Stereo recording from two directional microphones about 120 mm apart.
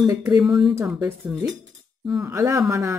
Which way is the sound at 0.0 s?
25° right (ahead or behind).